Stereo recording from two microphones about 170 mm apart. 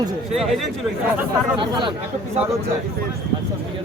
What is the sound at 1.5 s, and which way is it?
Speech, 25° right (ahead or behind).